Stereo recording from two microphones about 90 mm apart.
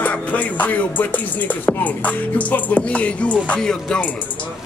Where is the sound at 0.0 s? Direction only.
15° left (ahead or behind).